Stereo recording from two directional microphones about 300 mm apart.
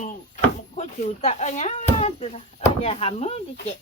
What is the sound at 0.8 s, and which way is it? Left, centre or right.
Speech, left.